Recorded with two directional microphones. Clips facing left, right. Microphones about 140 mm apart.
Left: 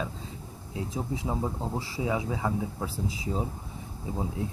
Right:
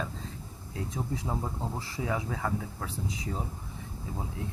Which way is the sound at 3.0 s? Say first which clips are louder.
Left 4 dB; 25° left (ahead or behind).